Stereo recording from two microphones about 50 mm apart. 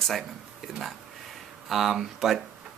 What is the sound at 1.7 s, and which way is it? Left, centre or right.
Speech, centre.